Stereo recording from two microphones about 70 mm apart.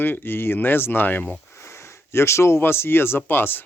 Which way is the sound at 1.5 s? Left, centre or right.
Left.